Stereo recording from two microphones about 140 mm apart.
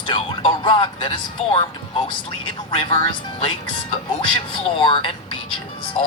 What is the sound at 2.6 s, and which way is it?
Speech, 40° left (ahead or behind).